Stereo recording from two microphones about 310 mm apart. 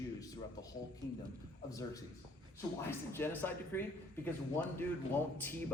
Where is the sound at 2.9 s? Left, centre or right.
Centre.